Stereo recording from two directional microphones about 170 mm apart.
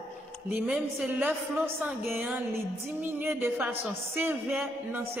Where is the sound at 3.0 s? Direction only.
10° right (ahead or behind).